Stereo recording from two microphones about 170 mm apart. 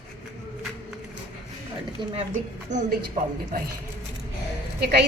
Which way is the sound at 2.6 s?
45° right (ahead or behind).